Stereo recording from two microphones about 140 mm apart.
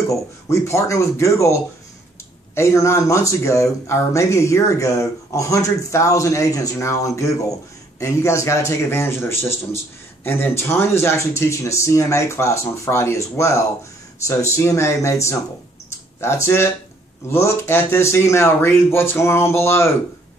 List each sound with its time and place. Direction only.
0.1 s speech: 20° left (ahead or behind)